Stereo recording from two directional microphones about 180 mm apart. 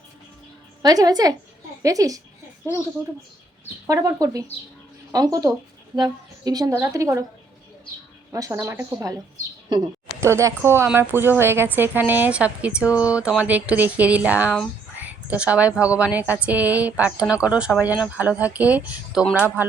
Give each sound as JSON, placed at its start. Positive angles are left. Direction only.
{"t": 0.8, "sound": "a woman's voice", "side_deg": -20}
{"t": 3.8, "sound": "a woman's voice", "side_deg": -20}
{"t": 8.3, "sound": "a woman's voice", "side_deg": -15}